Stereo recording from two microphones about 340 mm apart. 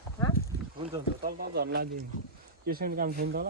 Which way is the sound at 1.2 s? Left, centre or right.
Right.